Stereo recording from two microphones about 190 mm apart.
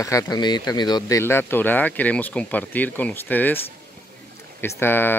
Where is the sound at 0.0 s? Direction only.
20° left (ahead or behind).